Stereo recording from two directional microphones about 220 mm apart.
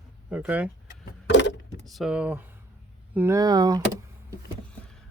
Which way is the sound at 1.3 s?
55° left (ahead or behind).